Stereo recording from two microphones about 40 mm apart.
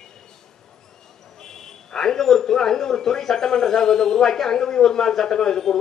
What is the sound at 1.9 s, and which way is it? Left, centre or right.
Speech, centre.